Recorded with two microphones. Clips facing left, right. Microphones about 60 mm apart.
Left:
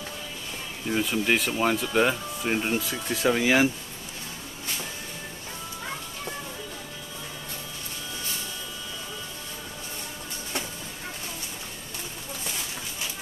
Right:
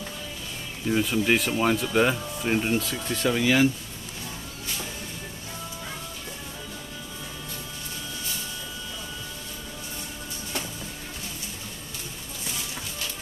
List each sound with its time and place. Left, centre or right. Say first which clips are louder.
0.8 s speech: right 2 dB; centre
3.3 s speech: even; centre